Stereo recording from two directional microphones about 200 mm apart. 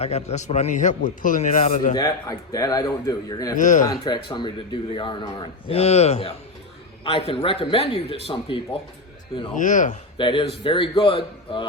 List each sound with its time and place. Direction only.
0.0 s a man's voice: 30° left (ahead or behind)
1.9 s speech: 20° left (ahead or behind)
3.6 s a man's voice: 40° left (ahead or behind)
4.3 s speech: 20° left (ahead or behind)
9.6 s a man's voice: 40° left (ahead or behind)
10.2 s speech: 25° left (ahead or behind)